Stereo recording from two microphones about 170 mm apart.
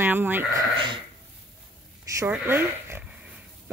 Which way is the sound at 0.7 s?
30° right (ahead or behind).